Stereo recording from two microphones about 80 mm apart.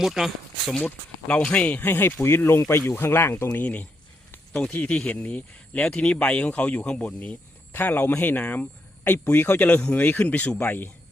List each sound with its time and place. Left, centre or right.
0.0 s speech: centre
0.7 s speech: centre
1.8 s speech: left